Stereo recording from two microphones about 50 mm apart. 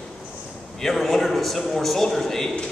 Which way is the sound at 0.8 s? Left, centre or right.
Centre.